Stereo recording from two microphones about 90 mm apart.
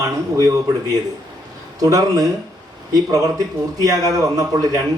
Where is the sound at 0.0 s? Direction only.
35° right (ahead or behind).